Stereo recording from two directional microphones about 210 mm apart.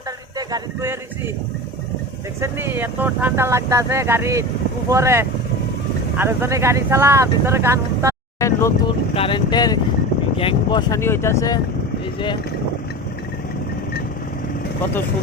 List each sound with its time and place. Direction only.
0.3 s speech: 15° right (ahead or behind)
2.4 s speech: 10° right (ahead or behind)
8.4 s vehicle: 15° left (ahead or behind)
9.1 s vehicle: 25° left (ahead or behind)
10.3 s speech: 25° left (ahead or behind)